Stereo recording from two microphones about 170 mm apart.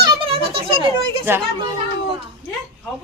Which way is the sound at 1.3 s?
15° right (ahead or behind).